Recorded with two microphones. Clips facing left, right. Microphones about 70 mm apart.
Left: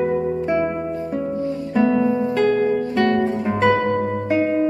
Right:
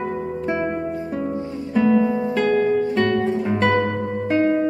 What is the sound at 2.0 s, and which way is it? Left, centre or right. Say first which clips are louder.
Music: left 2 dB; right.